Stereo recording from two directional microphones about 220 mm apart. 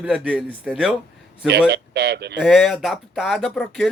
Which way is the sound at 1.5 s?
50° right (ahead or behind).